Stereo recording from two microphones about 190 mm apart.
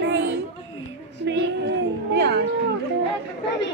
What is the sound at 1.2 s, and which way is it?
Music, 60° right (ahead or behind).